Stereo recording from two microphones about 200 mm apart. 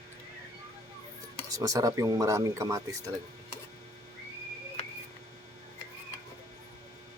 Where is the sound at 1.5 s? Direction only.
15° right (ahead or behind).